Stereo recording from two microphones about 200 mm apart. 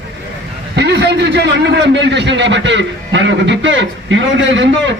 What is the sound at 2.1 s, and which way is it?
A man's voice, 60° right (ahead or behind).